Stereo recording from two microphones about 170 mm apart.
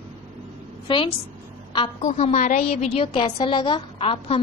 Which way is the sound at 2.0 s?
45° left (ahead or behind).